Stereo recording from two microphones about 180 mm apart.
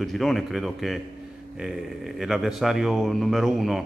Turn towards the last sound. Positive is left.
turn(degrees=0)  # may be behind; listen again after turning